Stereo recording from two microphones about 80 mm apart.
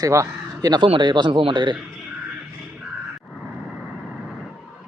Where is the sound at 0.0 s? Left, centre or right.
Right.